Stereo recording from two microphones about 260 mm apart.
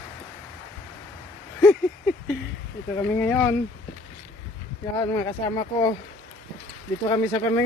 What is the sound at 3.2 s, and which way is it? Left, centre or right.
Speech, centre.